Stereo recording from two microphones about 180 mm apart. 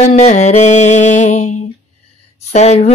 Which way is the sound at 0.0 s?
35° left (ahead or behind).